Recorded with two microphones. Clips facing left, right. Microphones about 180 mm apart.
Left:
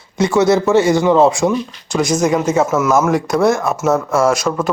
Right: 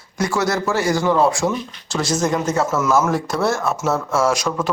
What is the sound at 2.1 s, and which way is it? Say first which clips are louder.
Speech: left 4 dB; centre (ahead or behind).